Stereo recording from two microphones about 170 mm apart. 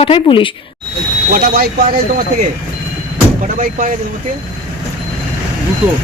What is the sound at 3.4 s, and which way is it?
Speech, 50° right (ahead or behind).